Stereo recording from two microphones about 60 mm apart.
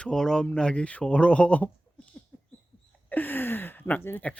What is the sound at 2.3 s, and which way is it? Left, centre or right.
Rodents, left.